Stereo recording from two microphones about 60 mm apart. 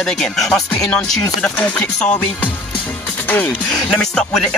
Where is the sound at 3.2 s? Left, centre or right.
Left.